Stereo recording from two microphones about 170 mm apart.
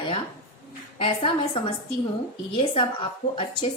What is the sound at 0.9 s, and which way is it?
A woman's voice, 30° left (ahead or behind).